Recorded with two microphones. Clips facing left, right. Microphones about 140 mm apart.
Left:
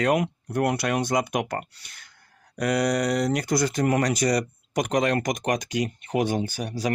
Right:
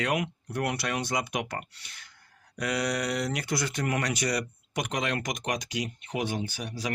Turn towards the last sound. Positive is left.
turn(degrees=45)  # may be behind; listen again after turning